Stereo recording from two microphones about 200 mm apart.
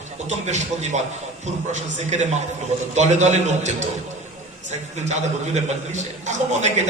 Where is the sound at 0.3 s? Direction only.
35° right (ahead or behind).